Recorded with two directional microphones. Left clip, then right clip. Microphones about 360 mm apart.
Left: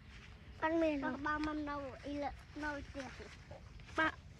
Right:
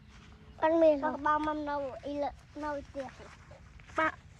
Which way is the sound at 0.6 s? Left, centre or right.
Centre.